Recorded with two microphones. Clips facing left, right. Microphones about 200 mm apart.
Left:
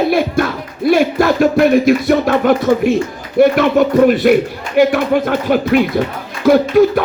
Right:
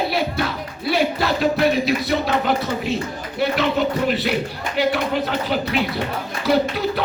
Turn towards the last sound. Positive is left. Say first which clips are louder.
# left 9 dB
turn(degrees=50)  # may be behind; listen again after turning